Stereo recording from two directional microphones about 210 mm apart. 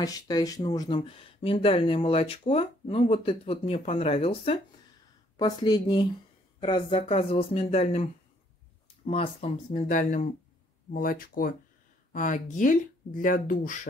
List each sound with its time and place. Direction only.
0.0 s speech: 15° left (ahead or behind); by 13.7 s 40° left (ahead or behind)